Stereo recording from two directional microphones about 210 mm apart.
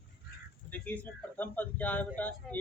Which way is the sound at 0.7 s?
10° left (ahead or behind).